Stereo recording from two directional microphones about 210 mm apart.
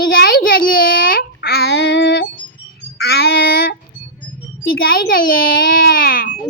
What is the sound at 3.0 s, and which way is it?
Music, 50° left (ahead or behind).